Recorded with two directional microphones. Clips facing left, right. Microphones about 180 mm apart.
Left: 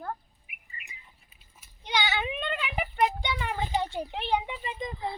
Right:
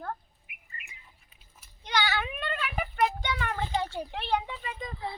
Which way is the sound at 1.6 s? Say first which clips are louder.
Even; 15° left (ahead or behind).